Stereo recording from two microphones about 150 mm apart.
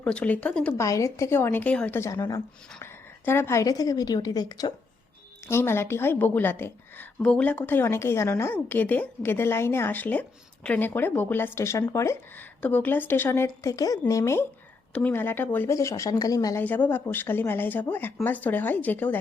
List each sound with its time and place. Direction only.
0.0 s a woman's voice: 5° left (ahead or behind)
0.8 s a woman's voice: 20° left (ahead or behind)
2.0 s a woman's voice: 20° left (ahead or behind)
16.6 s a woman's voice: 10° left (ahead or behind)